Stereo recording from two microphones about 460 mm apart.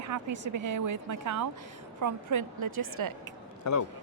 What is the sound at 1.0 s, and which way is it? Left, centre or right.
Speech, right.